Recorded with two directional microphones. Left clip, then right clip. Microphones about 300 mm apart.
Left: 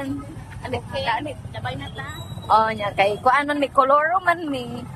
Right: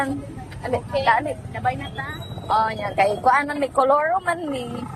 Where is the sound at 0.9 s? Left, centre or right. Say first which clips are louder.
Right 6 dB; centre.